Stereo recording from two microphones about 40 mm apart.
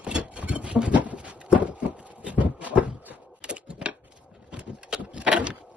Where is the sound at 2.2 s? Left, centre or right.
Right.